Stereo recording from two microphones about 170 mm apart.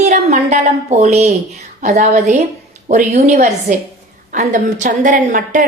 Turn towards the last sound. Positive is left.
turn(degrees=-50)  # may be behind; listen again after turning